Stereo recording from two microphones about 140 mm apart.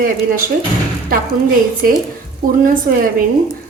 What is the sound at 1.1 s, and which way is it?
A woman's voice, 80° right.